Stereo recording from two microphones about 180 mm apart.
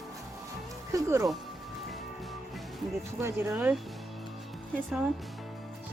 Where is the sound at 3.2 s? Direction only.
15° right (ahead or behind).